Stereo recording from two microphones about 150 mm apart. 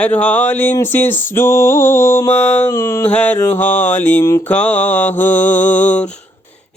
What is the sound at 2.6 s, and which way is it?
Mantra, 20° left (ahead or behind).